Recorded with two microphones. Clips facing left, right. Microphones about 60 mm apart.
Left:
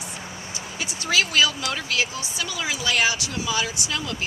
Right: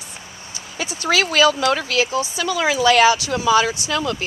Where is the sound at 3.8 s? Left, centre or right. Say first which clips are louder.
Right 7 dB; right.